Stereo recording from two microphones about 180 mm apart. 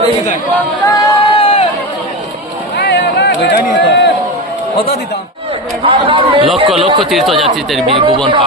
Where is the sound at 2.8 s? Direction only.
65° left (ahead or behind).